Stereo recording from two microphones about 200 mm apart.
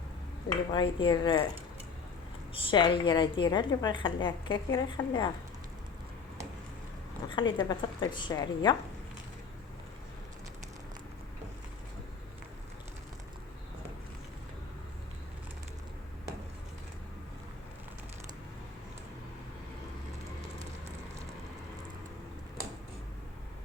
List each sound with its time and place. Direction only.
0.7 s a woman's voice: 25° left (ahead or behind)
2.5 s a woman's voice: 25° left (ahead or behind)
7.3 s a woman's voice: 25° left (ahead or behind)